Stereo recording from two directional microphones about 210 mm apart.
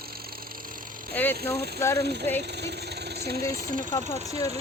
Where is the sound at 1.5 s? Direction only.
50° right (ahead or behind).